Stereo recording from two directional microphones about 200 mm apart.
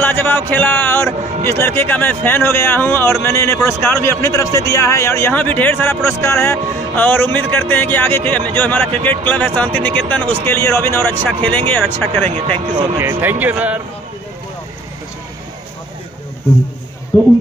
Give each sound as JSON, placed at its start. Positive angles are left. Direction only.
{"t": 0.0, "sound": "speech", "side_deg": 10}
{"t": 12.3, "sound": "speech", "side_deg": -30}
{"t": 12.9, "sound": "speech", "side_deg": -10}
{"t": 17.1, "sound": "speech", "side_deg": 20}